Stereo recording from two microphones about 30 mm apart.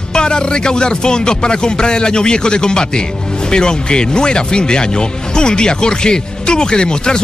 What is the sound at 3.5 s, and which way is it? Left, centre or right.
Speech, left.